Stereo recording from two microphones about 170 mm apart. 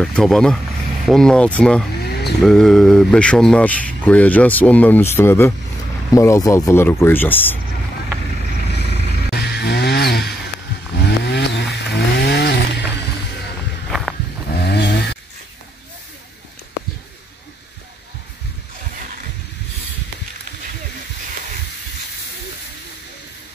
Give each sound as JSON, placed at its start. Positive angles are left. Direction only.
{"t": 0.0, "sound": "speech", "side_deg": 0}
{"t": 9.3, "sound": "music", "side_deg": 70}
{"t": 11.0, "sound": "chainsaw", "side_deg": 80}
{"t": 13.8, "sound": "walk", "side_deg": 0}
{"t": 14.5, "sound": "a sound", "side_deg": 80}